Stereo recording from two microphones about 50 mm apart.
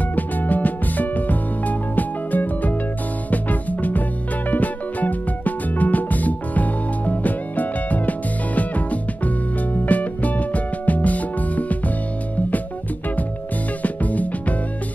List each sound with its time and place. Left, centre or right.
0.1 s music: left
13.8 s music: left